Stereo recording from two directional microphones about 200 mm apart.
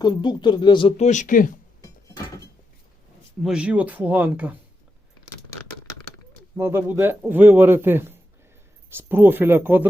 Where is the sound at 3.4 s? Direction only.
5° right (ahead or behind).